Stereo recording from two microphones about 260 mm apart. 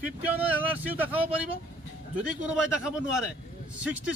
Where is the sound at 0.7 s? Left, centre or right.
Centre.